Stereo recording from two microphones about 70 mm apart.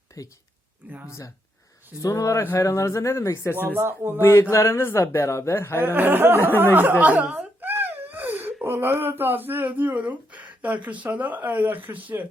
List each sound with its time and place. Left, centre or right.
0.2 s speech: left
0.8 s speech: right
2.0 s speech: left
3.5 s speech: right
4.2 s speech: left
5.8 s speech: right
7.0 s speech: right
7.6 s speech: right